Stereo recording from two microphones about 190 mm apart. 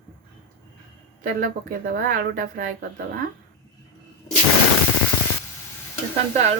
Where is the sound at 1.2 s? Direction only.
45° right (ahead or behind).